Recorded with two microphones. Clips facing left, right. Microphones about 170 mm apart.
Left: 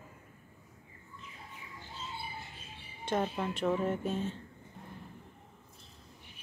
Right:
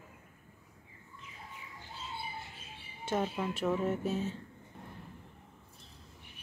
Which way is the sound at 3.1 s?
5° right (ahead or behind).